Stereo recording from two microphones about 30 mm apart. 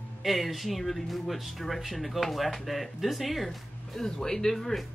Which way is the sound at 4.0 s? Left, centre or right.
Centre.